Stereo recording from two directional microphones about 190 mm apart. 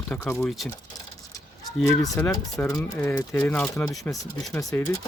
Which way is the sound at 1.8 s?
15° left (ahead or behind).